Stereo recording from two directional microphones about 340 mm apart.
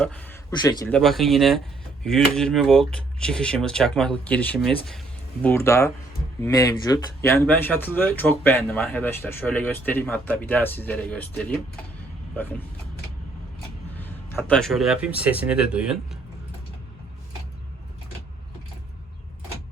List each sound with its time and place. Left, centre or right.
0.0 s speech: centre
13.9 s speech: centre